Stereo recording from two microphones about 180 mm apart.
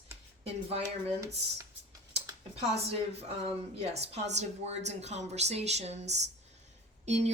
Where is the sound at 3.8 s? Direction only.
35° right (ahead or behind).